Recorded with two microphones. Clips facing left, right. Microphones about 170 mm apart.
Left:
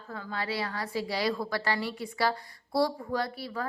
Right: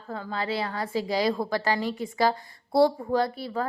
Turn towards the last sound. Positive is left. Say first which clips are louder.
# right 6 dB
turn(degrees=-25)  # may be behind; listen again after turning